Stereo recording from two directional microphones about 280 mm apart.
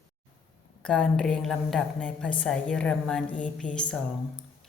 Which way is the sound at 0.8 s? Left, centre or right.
Centre.